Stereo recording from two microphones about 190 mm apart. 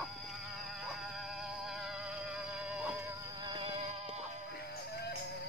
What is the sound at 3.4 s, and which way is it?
Music, 25° right (ahead or behind).